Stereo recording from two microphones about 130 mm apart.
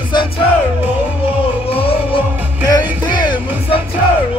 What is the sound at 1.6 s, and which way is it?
Music, 45° left (ahead or behind).